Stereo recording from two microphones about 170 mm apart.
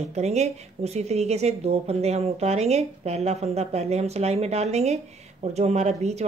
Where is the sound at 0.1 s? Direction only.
40° right (ahead or behind).